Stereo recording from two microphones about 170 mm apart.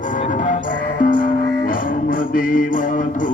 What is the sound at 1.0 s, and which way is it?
Music, 55° left (ahead or behind).